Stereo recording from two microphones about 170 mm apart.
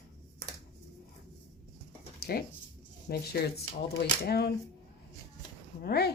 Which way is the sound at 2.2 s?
65° left (ahead or behind).